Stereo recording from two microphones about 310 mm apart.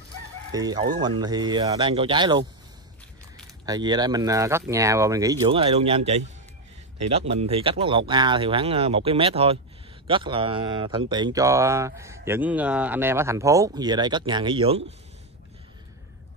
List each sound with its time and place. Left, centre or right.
0.5 s speech: centre
3.6 s speech: centre